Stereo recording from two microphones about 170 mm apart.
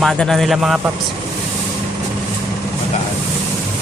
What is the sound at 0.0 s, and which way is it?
Speech, centre (ahead or behind).